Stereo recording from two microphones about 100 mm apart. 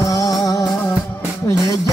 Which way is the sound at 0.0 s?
35° left (ahead or behind).